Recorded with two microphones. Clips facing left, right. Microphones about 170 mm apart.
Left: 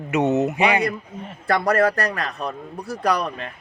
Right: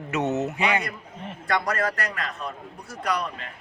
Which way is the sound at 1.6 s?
60° left (ahead or behind).